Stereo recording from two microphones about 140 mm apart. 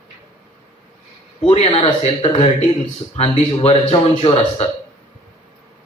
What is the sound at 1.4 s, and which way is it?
Speech, 40° left (ahead or behind).